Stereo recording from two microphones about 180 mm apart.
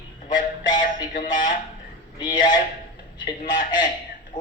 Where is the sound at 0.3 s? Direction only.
45° left (ahead or behind).